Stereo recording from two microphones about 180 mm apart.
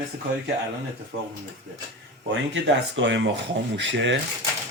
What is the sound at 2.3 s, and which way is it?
Speech, 85° right.